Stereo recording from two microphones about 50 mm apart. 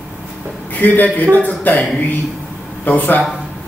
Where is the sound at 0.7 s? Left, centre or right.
Left.